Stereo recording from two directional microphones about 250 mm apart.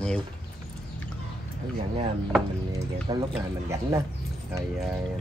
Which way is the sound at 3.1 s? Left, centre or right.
Centre.